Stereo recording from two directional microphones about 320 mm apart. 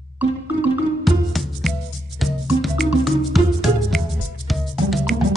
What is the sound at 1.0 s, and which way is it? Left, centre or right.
Music, centre.